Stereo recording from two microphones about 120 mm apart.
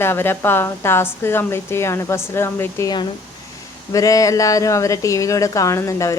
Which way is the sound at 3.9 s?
30° left (ahead or behind).